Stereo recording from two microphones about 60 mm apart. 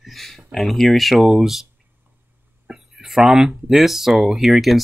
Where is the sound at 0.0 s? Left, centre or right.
Centre.